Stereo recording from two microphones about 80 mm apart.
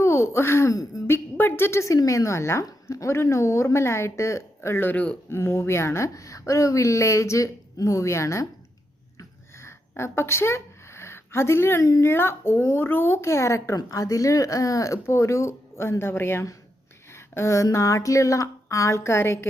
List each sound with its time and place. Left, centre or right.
0.0 s speech: left
1.0 s a woman's voice: left
9.1 s a sound: left
10.0 s a woman's voice: left